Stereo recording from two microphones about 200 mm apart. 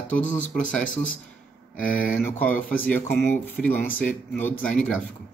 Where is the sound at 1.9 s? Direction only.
5° left (ahead or behind).